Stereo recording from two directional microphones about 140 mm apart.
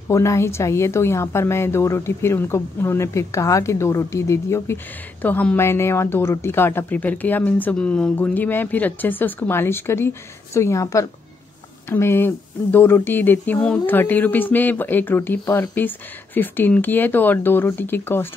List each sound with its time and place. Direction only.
0.1 s a woman's voice: 20° left (ahead or behind)